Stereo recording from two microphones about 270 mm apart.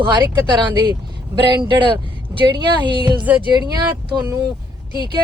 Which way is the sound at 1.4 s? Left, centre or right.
Centre.